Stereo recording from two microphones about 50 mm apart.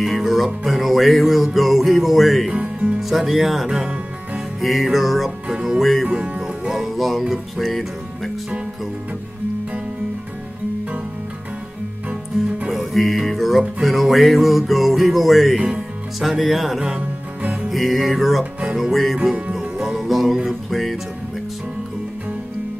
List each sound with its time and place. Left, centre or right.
0.0 s music: centre
2.5 s speech: right
3.0 s music: centre
5.8 s music: centre
6.1 s music: centre
6.8 s music: centre
12.6 s music: centre
18.4 s music: centre
18.8 s music: centre